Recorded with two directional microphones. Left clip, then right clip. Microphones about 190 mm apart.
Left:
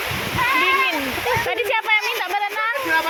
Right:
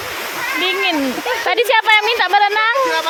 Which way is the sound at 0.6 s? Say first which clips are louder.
Right 1 dB; 40° right (ahead or behind).